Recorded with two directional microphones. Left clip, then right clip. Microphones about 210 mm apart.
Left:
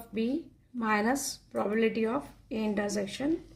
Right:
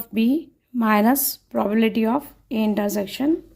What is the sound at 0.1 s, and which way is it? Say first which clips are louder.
A woman's voice: right 10 dB; 45° right (ahead or behind).